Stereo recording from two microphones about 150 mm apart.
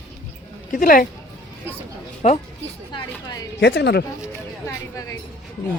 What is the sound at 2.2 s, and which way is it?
Speech, 55° left (ahead or behind).